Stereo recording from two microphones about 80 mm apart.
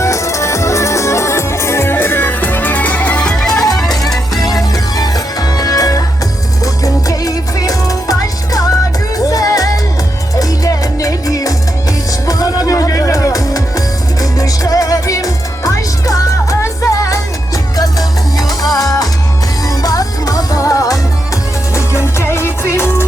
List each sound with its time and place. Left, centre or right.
0.0 s music: left; by 3.8 s centre
4.4 s music: left
9.1 s music: left
18.7 s music: left